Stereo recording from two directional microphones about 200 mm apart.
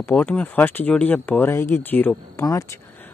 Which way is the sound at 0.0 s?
10° left (ahead or behind).